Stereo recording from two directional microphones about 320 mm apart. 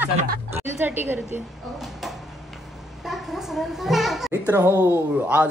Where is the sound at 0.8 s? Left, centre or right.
Centre.